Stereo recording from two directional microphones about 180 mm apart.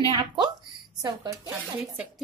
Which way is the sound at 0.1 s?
25° right (ahead or behind).